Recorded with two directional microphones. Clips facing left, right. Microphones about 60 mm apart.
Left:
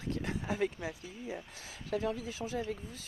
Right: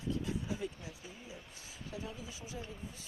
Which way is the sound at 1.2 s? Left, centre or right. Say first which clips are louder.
Left 8 dB; left.